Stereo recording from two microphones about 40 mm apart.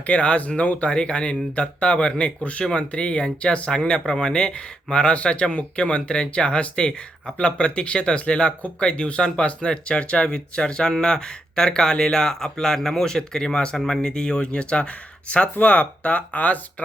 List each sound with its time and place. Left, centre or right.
0.0 s speech: left
3.8 s speech: centre; by 16.8 s left